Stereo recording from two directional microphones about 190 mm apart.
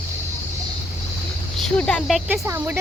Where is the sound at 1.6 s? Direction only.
5° left (ahead or behind).